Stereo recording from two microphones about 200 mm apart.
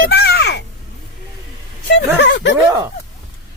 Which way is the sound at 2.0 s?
60° left (ahead or behind).